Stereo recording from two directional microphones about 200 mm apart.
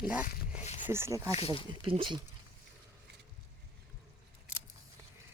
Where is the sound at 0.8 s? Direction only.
10° right (ahead or behind).